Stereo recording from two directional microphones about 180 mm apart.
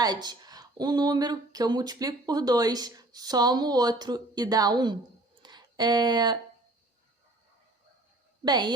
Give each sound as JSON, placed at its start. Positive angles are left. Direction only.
{"t": 0.0, "sound": "a woman's voice", "side_deg": -25}
{"t": 5.4, "sound": "a sound", "side_deg": -25}
{"t": 8.4, "sound": "a woman's voice", "side_deg": -25}